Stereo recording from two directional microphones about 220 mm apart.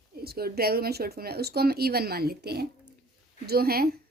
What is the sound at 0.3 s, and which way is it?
A woman's voice, 45° right (ahead or behind).